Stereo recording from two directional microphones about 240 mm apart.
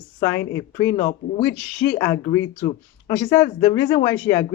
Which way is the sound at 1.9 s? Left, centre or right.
Centre.